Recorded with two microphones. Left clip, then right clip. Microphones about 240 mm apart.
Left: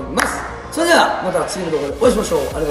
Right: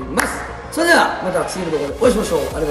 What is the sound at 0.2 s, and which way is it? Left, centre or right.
Music, centre.